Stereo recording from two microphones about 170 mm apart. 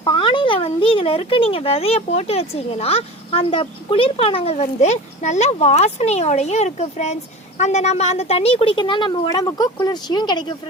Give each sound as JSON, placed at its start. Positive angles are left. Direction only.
{"t": 0.0, "sound": "speech", "side_deg": 30}